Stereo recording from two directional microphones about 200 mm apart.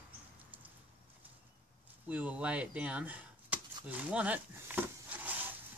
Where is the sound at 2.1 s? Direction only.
5° right (ahead or behind).